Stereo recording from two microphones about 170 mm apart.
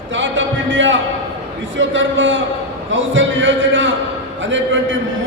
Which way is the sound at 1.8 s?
90° right.